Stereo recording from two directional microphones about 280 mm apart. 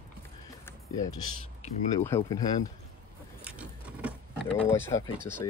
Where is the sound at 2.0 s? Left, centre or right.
Centre.